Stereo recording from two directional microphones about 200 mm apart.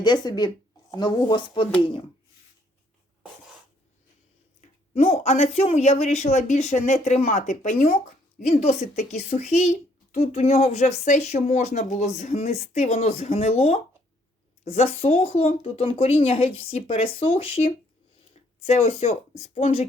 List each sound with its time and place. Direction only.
0.0 s speech: 20° left (ahead or behind)
4.9 s speech: 30° left (ahead or behind)